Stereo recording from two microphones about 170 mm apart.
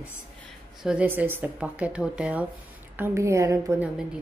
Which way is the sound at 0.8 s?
10° right (ahead or behind).